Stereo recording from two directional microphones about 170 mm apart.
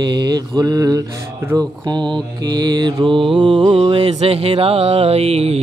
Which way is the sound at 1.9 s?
25° right (ahead or behind).